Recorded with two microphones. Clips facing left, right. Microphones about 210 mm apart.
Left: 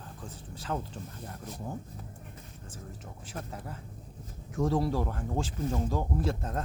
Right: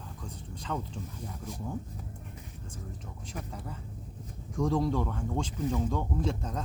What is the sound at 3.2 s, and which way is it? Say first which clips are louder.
Speech: even; 5° left (ahead or behind).